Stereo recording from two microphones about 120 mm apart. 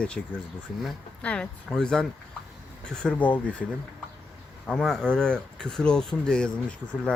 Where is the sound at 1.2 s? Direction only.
10° left (ahead or behind).